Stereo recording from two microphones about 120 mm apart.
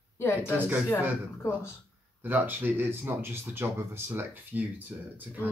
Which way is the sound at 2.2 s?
15° right (ahead or behind).